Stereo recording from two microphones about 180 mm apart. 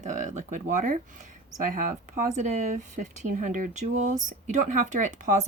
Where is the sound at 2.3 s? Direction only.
40° right (ahead or behind).